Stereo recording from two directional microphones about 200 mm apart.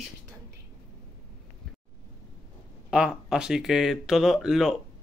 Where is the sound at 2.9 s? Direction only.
5° right (ahead or behind).